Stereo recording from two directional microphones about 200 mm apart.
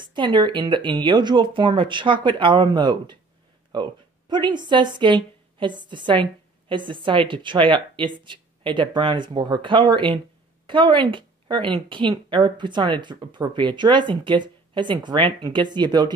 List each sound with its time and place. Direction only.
0.0 s a woman's voice: 25° right (ahead or behind)